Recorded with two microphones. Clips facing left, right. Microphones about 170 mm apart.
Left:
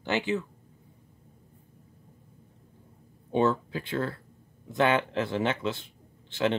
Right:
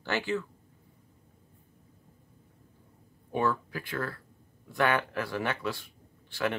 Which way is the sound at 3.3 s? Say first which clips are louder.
Left 4 dB; 25° left (ahead or behind).